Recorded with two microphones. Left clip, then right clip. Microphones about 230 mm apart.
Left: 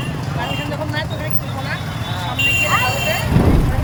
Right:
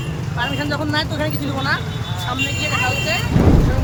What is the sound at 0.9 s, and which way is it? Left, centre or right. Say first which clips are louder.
Speech: right 3 dB; centre.